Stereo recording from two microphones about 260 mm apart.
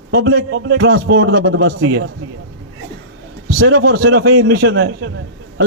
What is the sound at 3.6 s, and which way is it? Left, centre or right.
A man's voice, right.